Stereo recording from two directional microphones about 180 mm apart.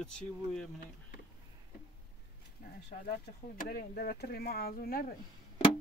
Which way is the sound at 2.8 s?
65° left (ahead or behind).